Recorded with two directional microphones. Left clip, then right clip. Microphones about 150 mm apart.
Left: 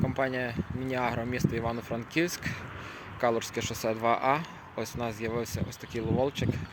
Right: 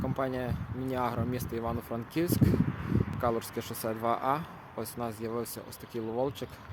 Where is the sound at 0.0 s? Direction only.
Centre (ahead or behind).